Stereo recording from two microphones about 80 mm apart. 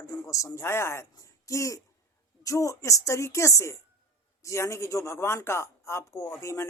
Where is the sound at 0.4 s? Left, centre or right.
Left.